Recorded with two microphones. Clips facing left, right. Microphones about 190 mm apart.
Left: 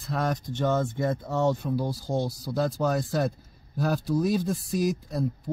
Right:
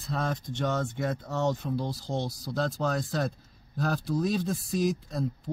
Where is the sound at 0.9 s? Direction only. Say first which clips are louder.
Left 4 dB; 15° left (ahead or behind).